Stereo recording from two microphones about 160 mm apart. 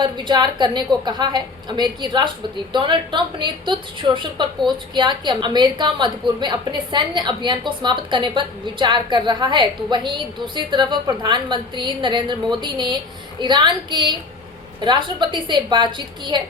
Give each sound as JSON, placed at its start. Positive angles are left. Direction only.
{"t": 0.0, "sound": "a woman's voice", "side_deg": -30}